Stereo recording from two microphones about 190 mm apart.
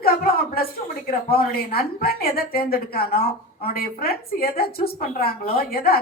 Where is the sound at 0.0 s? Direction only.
55° left (ahead or behind).